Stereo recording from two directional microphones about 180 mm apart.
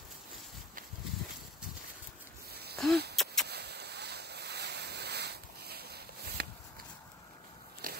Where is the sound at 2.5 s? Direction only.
60° right (ahead or behind).